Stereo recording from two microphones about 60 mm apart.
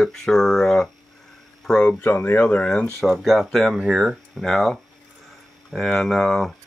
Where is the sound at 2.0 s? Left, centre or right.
Left.